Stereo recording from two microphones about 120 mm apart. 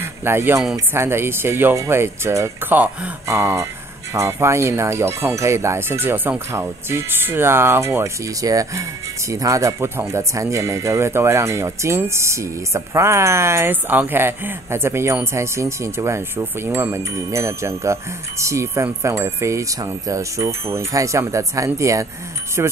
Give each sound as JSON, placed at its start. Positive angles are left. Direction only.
{"t": 0.0, "sound": "a man's voice", "side_deg": -20}